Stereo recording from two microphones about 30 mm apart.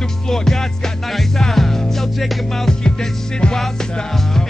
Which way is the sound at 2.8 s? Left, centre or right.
Left.